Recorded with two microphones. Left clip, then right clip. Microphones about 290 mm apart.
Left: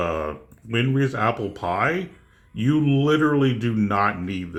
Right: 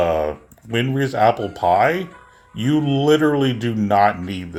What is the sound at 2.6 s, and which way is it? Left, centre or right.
Speech, centre.